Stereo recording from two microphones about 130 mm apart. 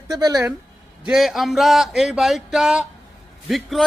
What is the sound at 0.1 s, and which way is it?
Speech, 30° right (ahead or behind).